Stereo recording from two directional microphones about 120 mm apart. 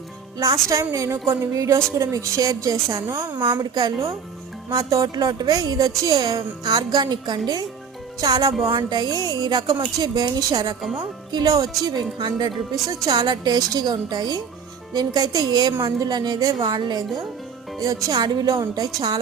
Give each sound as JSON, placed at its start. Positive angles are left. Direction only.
{"t": 0.3, "sound": "a woman's voice", "side_deg": -30}